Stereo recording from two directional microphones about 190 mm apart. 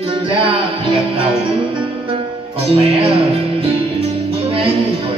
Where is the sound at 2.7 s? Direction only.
30° right (ahead or behind).